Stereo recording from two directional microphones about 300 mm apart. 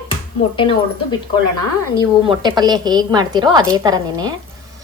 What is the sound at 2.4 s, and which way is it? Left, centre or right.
A woman's voice, centre.